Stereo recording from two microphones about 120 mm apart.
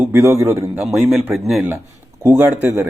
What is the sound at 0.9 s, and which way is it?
Speech, centre (ahead or behind).